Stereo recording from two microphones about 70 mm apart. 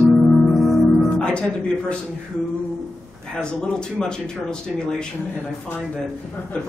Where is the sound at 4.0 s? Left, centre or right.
Centre.